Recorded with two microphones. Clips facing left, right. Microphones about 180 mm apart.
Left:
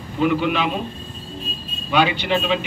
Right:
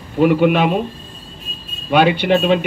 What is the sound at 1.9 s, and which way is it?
Speech, 50° right (ahead or behind).